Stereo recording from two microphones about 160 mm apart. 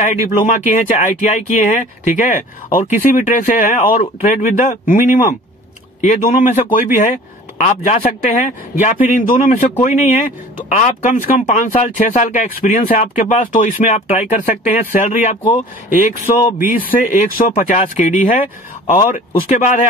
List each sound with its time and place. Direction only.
0.0 s speech: 50° left (ahead or behind)
16.8 s speech: 60° left (ahead or behind)
17.6 s speech: 50° left (ahead or behind)